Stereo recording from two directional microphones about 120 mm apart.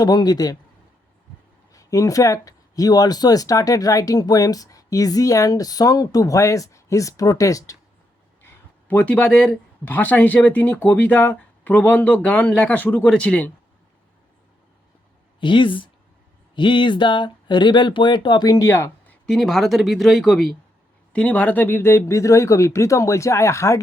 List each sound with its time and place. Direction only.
0.0 s speech: 35° left (ahead or behind)
1.7 s speech: 30° left (ahead or behind)
8.9 s speech: 10° left (ahead or behind)
15.4 s speech: 40° left (ahead or behind); by 19.1 s 20° left (ahead or behind)
19.3 s speech: centre (ahead or behind); by 23.8 s 25° left (ahead or behind)